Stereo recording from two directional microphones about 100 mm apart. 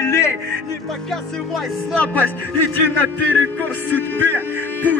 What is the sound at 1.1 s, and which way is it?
Speech, 5° left (ahead or behind).